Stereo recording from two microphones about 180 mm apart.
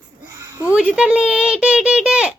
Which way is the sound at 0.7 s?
5° right (ahead or behind).